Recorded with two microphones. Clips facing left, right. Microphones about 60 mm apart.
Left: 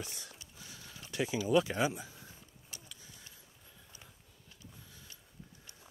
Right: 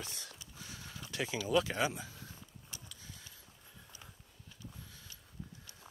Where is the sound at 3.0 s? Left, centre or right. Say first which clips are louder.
Right 2 dB; right.